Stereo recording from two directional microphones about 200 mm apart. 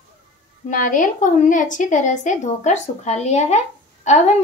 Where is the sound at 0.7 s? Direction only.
40° left (ahead or behind).